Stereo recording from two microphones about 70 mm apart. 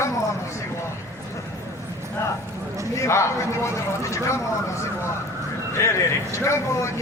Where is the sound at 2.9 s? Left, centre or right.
Left.